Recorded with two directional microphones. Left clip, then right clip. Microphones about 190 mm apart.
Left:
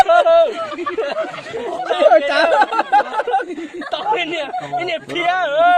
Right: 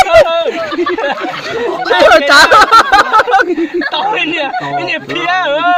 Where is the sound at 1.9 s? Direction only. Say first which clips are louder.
Right 7 dB; 40° right (ahead or behind).